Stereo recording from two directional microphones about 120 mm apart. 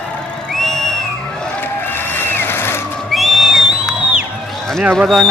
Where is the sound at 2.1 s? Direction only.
20° left (ahead or behind).